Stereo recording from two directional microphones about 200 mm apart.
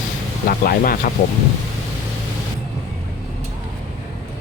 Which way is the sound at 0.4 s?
45° left (ahead or behind).